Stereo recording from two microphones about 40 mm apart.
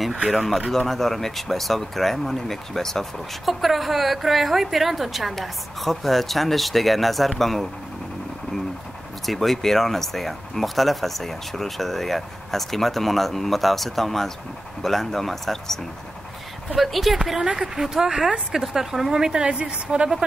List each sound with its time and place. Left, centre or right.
0.3 s speech: centre
9.2 s a woman's voice: centre; by 20.1 s right